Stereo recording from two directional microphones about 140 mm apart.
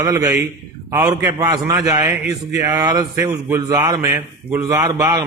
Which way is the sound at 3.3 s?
15° right (ahead or behind).